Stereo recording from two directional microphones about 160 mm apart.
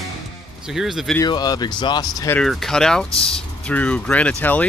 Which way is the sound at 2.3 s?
Centre (ahead or behind).